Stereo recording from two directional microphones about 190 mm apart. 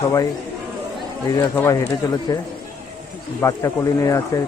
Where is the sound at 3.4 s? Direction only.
15° left (ahead or behind).